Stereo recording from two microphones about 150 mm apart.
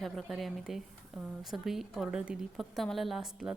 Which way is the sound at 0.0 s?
Centre (ahead or behind).